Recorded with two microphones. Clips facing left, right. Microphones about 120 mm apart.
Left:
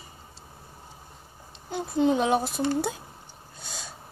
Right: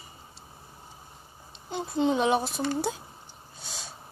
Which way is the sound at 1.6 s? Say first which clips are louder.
Left 2 dB; 45° left (ahead or behind).